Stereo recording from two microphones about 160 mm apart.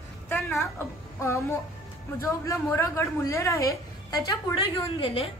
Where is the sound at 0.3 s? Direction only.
15° left (ahead or behind).